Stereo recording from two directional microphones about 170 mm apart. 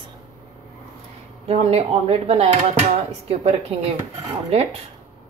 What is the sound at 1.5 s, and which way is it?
A woman's voice, 40° right (ahead or behind).